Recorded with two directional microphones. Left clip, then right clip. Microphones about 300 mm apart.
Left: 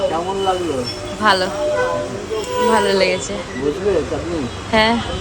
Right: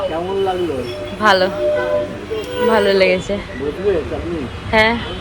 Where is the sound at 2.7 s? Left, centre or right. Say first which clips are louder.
Right 4 dB; centre.